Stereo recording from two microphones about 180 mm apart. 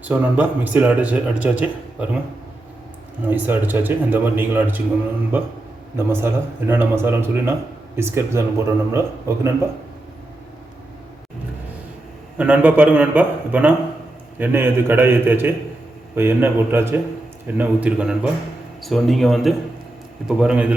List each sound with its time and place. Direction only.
0.0 s speech: 10° right (ahead or behind)
3.2 s speech: 10° right (ahead or behind)
6.0 s speech: 15° right (ahead or behind)
12.4 s speech: 10° right (ahead or behind)